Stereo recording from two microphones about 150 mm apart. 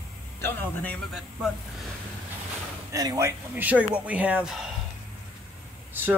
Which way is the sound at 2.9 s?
25° right (ahead or behind).